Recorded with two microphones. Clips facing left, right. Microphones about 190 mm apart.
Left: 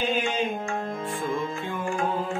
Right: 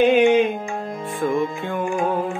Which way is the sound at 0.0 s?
65° right (ahead or behind).